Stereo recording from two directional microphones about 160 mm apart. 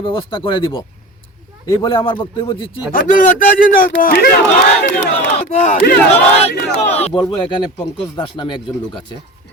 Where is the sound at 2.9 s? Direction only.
60° left (ahead or behind).